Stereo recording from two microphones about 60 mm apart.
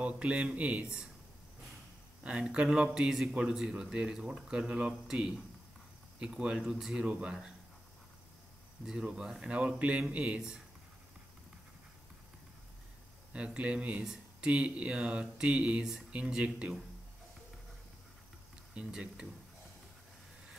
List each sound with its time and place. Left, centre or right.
0.0 s speech: right
2.2 s speech: centre
8.8 s speech: centre
13.3 s speech: centre
18.8 s speech: centre